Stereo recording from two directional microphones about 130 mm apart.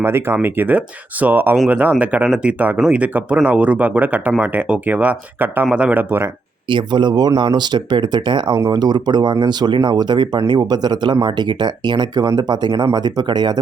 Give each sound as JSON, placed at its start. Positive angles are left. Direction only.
{"t": 0.0, "sound": "speech", "side_deg": -20}
{"t": 6.7, "sound": "speech", "side_deg": -35}